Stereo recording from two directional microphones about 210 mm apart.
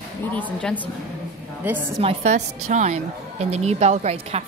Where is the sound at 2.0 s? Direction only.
30° right (ahead or behind).